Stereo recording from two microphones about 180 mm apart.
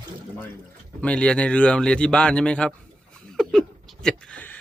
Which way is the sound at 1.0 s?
5° left (ahead or behind).